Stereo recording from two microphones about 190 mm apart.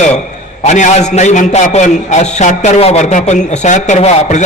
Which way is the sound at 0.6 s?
40° left (ahead or behind).